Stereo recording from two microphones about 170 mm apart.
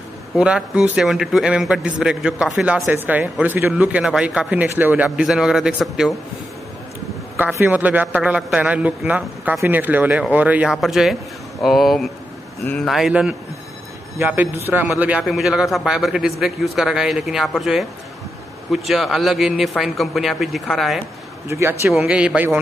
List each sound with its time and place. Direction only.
0.4 s a man's voice: 5° right (ahead or behind)
7.3 s a man's voice: 10° right (ahead or behind)
21.5 s a man's voice: 15° right (ahead or behind)